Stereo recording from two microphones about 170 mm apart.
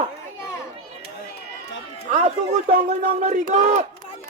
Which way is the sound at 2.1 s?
45° right (ahead or behind).